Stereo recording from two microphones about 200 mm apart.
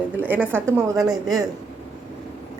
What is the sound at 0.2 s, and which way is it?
Speech, 10° right (ahead or behind).